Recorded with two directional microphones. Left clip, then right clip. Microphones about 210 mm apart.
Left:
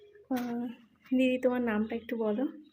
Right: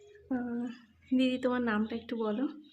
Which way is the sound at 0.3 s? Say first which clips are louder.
Left 1 dB; 10° right (ahead or behind).